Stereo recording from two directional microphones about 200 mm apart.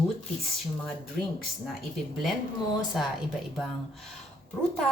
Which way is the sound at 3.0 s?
Centre (ahead or behind).